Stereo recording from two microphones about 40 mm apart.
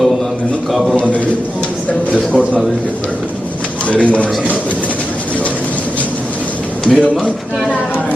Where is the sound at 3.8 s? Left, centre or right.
Left.